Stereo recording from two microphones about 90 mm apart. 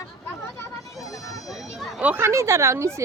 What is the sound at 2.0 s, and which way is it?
Speech, 20° right (ahead or behind).